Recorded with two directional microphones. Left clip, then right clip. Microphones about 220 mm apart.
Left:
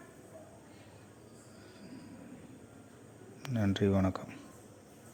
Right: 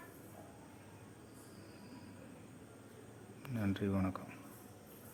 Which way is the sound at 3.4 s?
25° left (ahead or behind).